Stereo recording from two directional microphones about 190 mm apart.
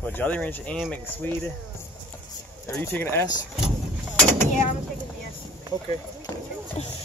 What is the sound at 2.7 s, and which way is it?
Speech, 10° left (ahead or behind).